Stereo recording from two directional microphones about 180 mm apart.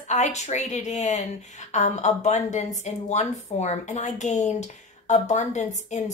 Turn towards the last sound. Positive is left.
turn(degrees=40)  # may be behind; listen again after turning